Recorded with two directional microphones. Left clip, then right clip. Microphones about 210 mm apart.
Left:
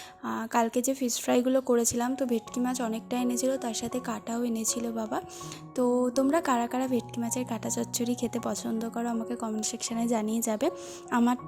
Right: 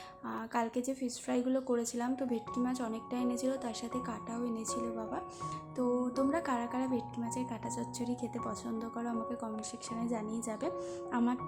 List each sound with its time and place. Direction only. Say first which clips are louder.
0.3 s a woman's voice: left 8 dB; 35° left (ahead or behind)